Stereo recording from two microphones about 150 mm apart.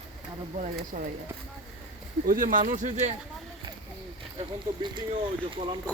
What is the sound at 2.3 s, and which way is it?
Speech, 65° right (ahead or behind).